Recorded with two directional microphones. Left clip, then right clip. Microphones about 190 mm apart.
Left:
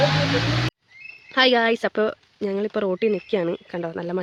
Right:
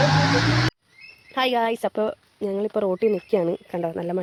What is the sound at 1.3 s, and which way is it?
Speech, 20° left (ahead or behind).